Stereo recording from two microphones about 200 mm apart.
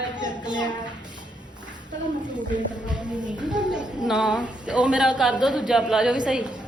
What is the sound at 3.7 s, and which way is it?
A woman's voice, 5° right (ahead or behind).